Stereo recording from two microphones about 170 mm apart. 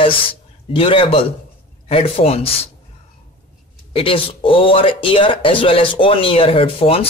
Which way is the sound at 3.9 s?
30° left (ahead or behind).